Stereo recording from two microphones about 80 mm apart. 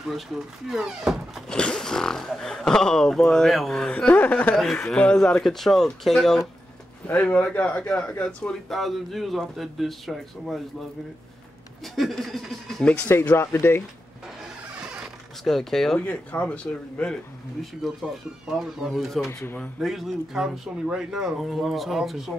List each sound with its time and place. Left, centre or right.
0.1 s speech: centre
1.5 s speech: centre
4.6 s speech: centre
7.1 s speech: centre
8.6 s speech: centre
11.8 s speech: centre
13.4 s speech: left
15.4 s speech: centre
16.0 s speech: centre
17.8 s speech: centre